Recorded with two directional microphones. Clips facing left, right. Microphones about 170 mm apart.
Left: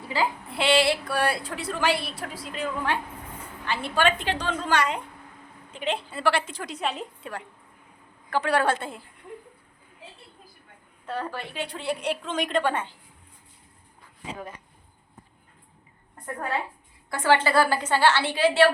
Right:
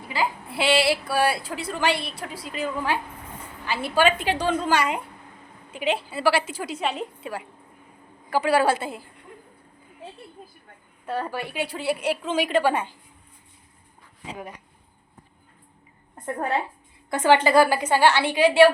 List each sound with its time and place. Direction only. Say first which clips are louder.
0.1 s a woman's voice: even; 10° right (ahead or behind)
11.0 s a woman's voice: right 3 dB; 10° right (ahead or behind)
16.1 s a woman's voice: right 4 dB; 25° right (ahead or behind)